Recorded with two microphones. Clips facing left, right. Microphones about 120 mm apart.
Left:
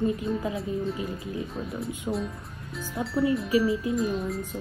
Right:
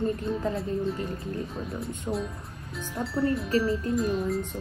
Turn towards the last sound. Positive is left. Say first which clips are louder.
# right 1 dB
turn(degrees=0)  # may be behind; listen again after turning